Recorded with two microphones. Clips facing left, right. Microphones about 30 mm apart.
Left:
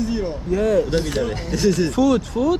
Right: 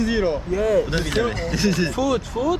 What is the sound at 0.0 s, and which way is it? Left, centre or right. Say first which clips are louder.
Speech: right 3 dB; right.